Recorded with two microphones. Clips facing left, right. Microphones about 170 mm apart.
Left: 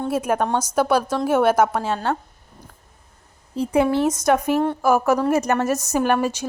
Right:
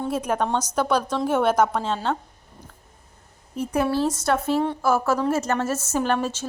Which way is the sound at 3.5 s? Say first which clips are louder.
Left 4 dB; 30° left (ahead or behind).